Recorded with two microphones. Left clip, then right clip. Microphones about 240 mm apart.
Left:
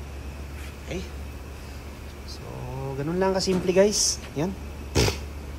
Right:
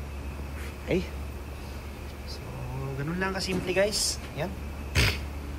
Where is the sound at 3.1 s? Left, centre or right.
Centre.